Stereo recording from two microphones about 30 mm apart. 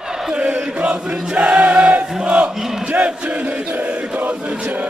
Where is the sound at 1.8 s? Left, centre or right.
Right.